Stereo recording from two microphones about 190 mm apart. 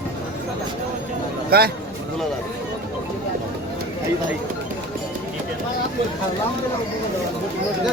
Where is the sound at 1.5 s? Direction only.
55° right (ahead or behind).